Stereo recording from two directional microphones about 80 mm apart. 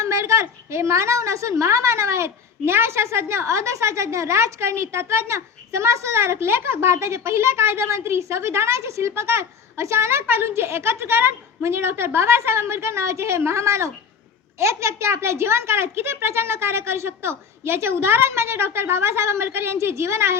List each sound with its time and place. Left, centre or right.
0.0 s a woman's voice: right